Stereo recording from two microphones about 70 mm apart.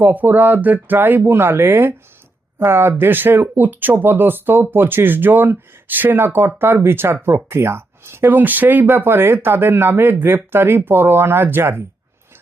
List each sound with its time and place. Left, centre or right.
0.0 s speech: right